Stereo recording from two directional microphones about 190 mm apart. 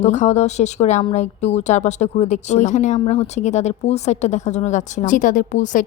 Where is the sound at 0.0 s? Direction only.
40° left (ahead or behind).